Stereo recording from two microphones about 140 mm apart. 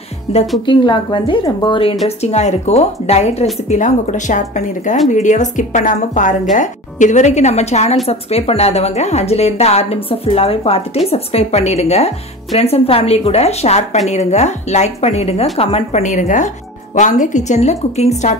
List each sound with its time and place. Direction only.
0.3 s a woman's voice: 45° left (ahead or behind)
2.0 s a woman's voice: 50° left (ahead or behind)